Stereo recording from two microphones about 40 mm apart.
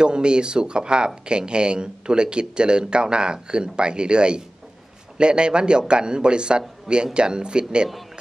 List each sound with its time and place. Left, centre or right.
0.0 s speech: right